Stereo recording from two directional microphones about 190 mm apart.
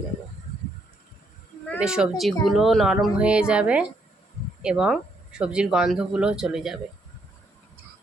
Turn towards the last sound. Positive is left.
turn(degrees=0)  # may be behind; listen again after turning